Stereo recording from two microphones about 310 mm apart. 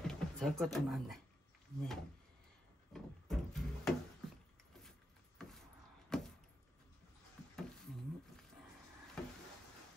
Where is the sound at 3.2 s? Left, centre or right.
Centre.